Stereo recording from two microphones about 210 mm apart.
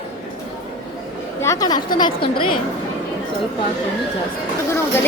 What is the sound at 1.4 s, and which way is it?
A woman's voice, 15° left (ahead or behind).